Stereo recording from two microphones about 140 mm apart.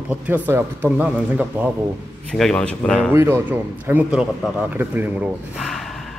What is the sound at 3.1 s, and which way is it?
A man's voice, 20° right (ahead or behind).